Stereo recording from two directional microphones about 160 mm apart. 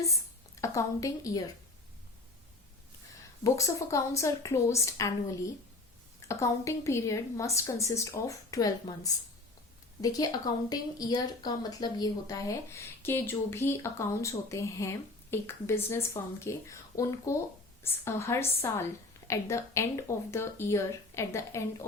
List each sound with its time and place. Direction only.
0.6 s speech: 20° left (ahead or behind)
3.4 s speech: 20° left (ahead or behind)